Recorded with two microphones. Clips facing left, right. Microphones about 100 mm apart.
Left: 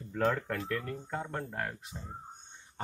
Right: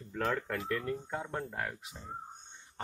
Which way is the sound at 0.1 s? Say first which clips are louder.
Left 3 dB; centre (ahead or behind).